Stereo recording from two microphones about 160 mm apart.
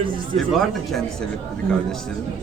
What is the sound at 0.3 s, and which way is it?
Speech, centre (ahead or behind).